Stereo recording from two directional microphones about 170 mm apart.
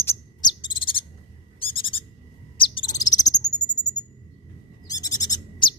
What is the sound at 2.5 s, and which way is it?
Bird, 30° left (ahead or behind).